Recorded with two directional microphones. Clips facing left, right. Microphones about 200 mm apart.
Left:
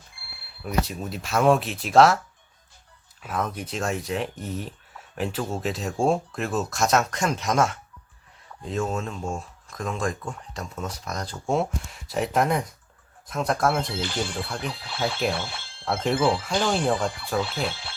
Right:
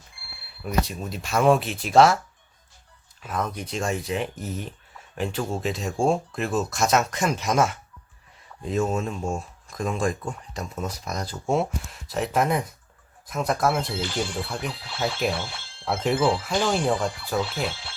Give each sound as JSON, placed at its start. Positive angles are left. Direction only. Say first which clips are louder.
{"t": 0.6, "sound": "speech", "louder": "even", "side_deg": 5}
{"t": 3.2, "sound": "speech", "louder": "even", "side_deg": 5}
{"t": 15.0, "sound": "speech", "louder": "even", "side_deg": 0}
{"t": 17.4, "sound": "speech", "louder": "even", "side_deg": 55}